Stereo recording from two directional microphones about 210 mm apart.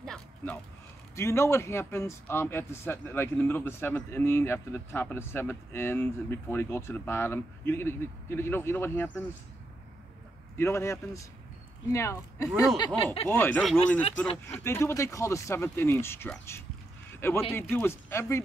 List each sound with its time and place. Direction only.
0.0 s a sound: centre (ahead or behind)
1.1 s a man's voice: 15° left (ahead or behind)
10.6 s a man's voice: 10° left (ahead or behind)
13.3 s a man's voice: 10° left (ahead or behind)
14.0 s speech: 25° left (ahead or behind)
14.5 s a man's voice: 10° left (ahead or behind)
17.1 s a sound: 10° left (ahead or behind)
17.5 s a man's voice: 10° left (ahead or behind)